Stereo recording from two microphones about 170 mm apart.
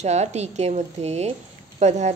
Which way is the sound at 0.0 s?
40° right (ahead or behind).